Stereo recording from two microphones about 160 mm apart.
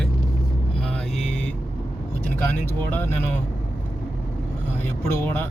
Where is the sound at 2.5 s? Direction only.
10° left (ahead or behind).